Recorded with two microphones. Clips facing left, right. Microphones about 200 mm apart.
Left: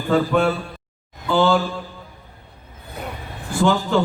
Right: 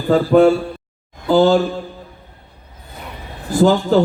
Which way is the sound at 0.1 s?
35° right (ahead or behind).